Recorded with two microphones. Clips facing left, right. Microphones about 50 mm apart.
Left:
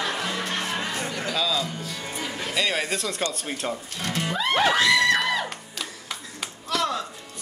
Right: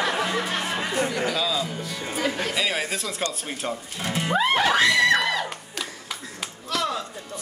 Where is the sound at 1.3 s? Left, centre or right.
Centre.